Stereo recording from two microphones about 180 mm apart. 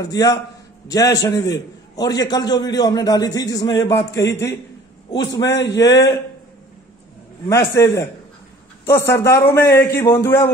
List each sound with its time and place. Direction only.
0.0 s a man's voice: 20° left (ahead or behind)
5.5 s a man's voice: 75° left (ahead or behind)
7.4 s a man's voice: 15° left (ahead or behind)